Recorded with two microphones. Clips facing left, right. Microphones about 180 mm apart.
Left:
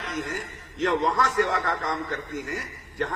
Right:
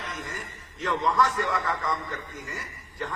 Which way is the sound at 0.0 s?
90° left.